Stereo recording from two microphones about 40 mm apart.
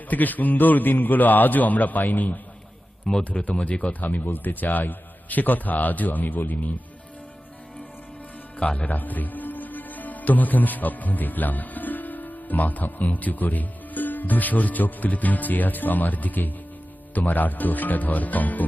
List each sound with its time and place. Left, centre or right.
0.1 s a man's voice: left
3.1 s speech: centre
3.4 s speech: left
4.0 s a man's voice: left
8.5 s a man's voice: left